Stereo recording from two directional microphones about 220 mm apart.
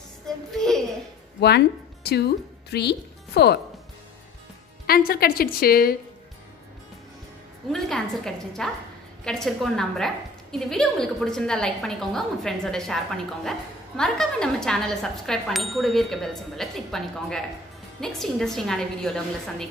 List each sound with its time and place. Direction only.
0.5 s a sound: centre (ahead or behind)
2.0 s speech: 45° left (ahead or behind)
4.8 s a woman's voice: 40° left (ahead or behind)
7.7 s a woman's voice: centre (ahead or behind)